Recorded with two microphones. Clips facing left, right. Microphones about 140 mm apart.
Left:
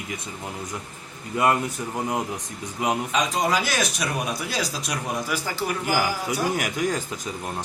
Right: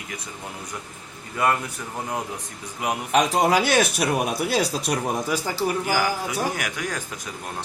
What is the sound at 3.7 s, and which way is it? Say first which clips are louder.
Speech: right 6 dB; 30° right (ahead or behind).